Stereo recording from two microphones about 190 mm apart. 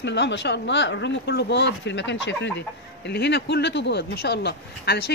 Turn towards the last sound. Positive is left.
turn(degrees=60)  # may be behind; listen again after turning